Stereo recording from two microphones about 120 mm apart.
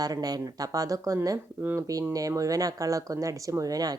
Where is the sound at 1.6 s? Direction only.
15° right (ahead or behind).